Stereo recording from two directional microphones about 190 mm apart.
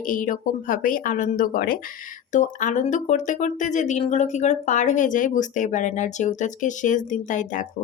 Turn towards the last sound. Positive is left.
turn(degrees=40)  # may be behind; listen again after turning